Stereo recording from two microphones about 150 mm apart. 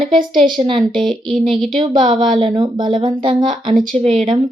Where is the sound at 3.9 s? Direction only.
45° right (ahead or behind).